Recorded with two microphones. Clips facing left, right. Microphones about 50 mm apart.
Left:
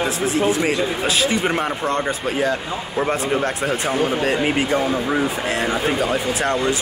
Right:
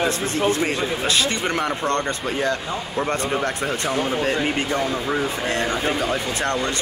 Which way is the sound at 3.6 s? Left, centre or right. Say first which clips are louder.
Left 3 dB; centre.